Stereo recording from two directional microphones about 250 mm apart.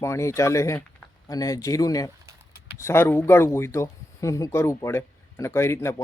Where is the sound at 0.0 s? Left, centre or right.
Centre.